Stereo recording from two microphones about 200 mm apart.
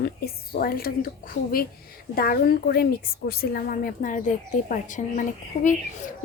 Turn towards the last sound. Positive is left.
turn(degrees=40)  # may be behind; listen again after turning